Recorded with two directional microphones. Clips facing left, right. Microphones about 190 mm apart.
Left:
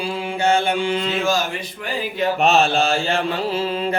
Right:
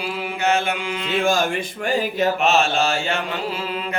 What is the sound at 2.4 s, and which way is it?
Mantra, 35° left (ahead or behind).